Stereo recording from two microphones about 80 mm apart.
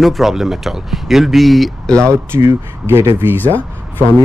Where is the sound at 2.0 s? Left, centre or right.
Right.